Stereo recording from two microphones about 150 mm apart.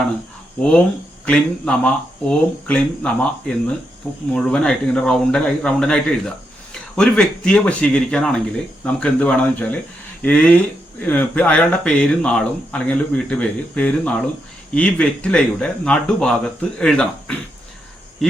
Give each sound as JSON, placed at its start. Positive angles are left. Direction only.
{"t": 1.2, "sound": "speech", "side_deg": 5}